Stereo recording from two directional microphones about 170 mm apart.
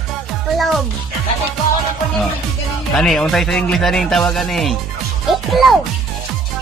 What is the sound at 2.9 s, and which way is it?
Speech, centre (ahead or behind).